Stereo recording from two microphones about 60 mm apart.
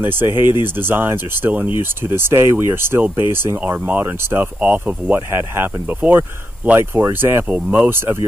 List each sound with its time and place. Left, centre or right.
0.0 s speech: right
2.0 s speech: right
4.6 s speech: right
5.3 s speech: right
7.4 s speech: right